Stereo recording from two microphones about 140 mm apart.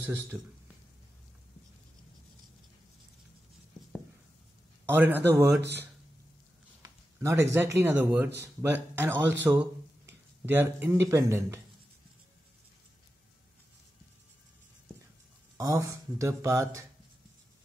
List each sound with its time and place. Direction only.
0.0 s a man's voice: 15° right (ahead or behind)
4.8 s a man's voice: 15° right (ahead or behind)
6.8 s speech: 20° right (ahead or behind)
15.5 s speech: 20° right (ahead or behind)